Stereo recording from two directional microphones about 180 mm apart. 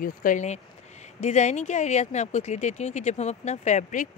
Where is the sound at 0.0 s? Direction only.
50° left (ahead or behind).